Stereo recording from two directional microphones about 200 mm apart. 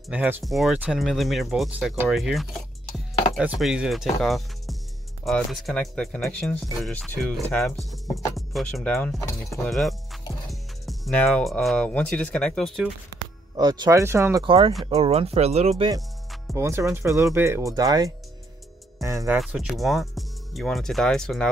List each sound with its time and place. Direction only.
0.1 s speech: 5° right (ahead or behind)
13.2 s speech: 20° right (ahead or behind)
14.4 s speech: 25° right (ahead or behind)
16.5 s speech: 15° right (ahead or behind)
19.3 s speech: centre (ahead or behind)